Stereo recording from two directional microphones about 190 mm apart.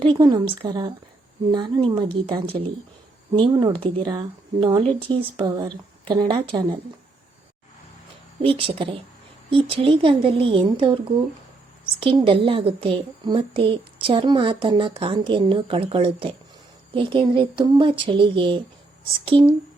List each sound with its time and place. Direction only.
0.0 s a woman's voice: 25° right (ahead or behind)
8.4 s a woman's voice: 30° right (ahead or behind)